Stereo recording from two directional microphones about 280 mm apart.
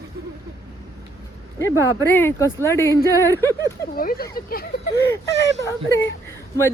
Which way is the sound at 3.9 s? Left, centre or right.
Left.